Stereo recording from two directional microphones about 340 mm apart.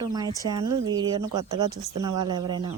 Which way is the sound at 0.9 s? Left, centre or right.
Centre.